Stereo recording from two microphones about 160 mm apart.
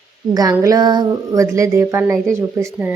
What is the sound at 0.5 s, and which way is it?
Speech, 20° right (ahead or behind).